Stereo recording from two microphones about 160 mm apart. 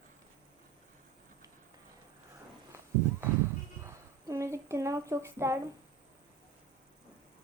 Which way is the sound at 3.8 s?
20° right (ahead or behind).